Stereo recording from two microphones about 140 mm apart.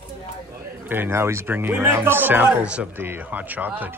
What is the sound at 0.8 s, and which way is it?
Speech, 15° right (ahead or behind).